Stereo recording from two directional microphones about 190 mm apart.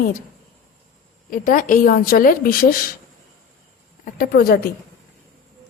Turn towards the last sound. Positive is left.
turn(degrees=55)  # may be behind; listen again after turning